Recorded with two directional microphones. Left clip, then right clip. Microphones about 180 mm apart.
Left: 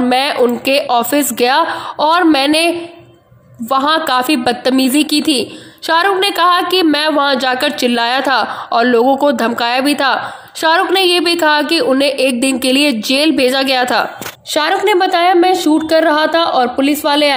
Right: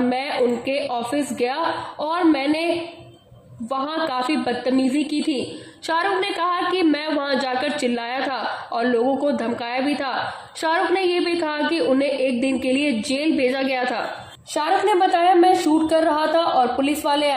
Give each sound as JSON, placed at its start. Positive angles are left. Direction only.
{"t": 0.1, "sound": "a woman's voice", "side_deg": 40}